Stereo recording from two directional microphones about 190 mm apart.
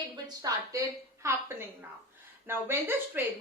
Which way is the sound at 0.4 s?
15° right (ahead or behind).